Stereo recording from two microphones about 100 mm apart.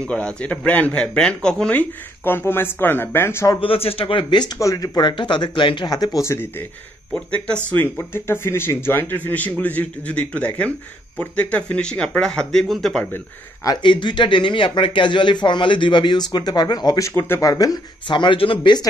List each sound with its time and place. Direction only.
0.0 s speech: 10° left (ahead or behind)
3.6 s speech: 70° left (ahead or behind); by 4.5 s 50° left (ahead or behind)
4.6 s speech: 35° left (ahead or behind)
7.1 s speech: 10° left (ahead or behind)
7.7 s speech: 20° left (ahead or behind); by 13.0 s 5° left (ahead or behind)
13.8 s speech: 50° left (ahead or behind)